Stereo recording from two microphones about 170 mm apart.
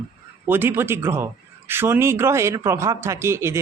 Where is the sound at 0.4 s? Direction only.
15° right (ahead or behind).